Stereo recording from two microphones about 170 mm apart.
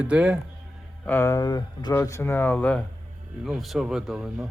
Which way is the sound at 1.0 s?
10° left (ahead or behind).